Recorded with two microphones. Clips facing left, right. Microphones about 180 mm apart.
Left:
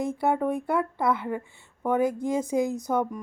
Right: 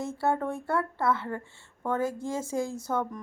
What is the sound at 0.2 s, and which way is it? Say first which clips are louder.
A woman's voice: left 1 dB; 15° left (ahead or behind).